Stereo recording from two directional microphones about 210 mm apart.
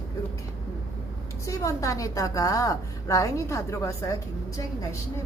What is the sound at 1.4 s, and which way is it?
A woman's voice, 15° left (ahead or behind).